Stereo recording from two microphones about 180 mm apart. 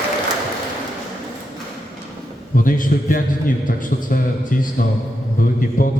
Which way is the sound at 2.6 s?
50° left (ahead or behind).